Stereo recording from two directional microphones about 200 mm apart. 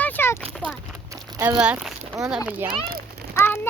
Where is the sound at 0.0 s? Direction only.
10° left (ahead or behind).